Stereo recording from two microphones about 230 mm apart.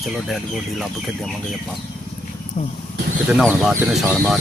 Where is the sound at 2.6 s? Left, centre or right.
Left.